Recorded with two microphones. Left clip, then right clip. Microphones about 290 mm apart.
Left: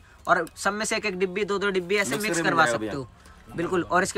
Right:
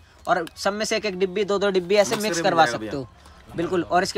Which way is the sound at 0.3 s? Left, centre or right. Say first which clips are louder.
Even; centre.